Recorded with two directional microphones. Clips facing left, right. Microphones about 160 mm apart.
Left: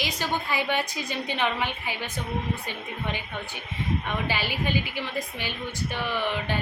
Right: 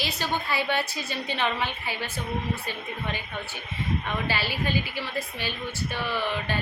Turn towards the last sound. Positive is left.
turn(degrees=15)  # may be behind; listen again after turning